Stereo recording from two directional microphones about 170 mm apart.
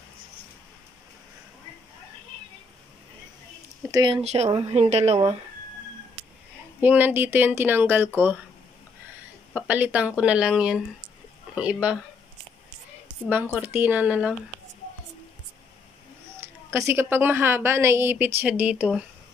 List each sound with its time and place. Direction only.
3.9 s speech: 25° right (ahead or behind)
4.2 s a woman's voice: 40° right (ahead or behind)
6.8 s a woman's voice: 10° right (ahead or behind)
9.5 s a woman's voice: 10° right (ahead or behind)
13.6 s a woman's voice: 10° right (ahead or behind)
16.7 s a woman's voice: 15° right (ahead or behind)